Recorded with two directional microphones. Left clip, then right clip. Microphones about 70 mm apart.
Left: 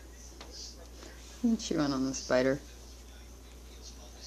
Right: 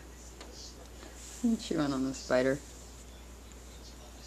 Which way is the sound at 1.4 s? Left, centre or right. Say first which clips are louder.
Left 1 dB; centre.